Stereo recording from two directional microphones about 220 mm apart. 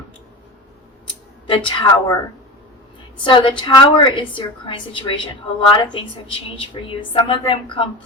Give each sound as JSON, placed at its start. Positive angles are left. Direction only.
{"t": 1.5, "sound": "a woman's voice", "side_deg": 20}
{"t": 3.2, "sound": "a woman's voice", "side_deg": 20}